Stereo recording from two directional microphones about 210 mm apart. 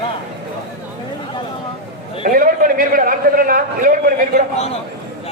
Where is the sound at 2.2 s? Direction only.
40° right (ahead or behind).